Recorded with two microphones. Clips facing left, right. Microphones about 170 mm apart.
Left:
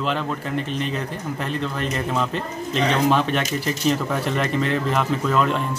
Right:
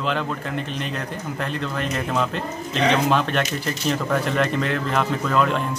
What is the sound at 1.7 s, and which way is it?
Speech, centre (ahead or behind).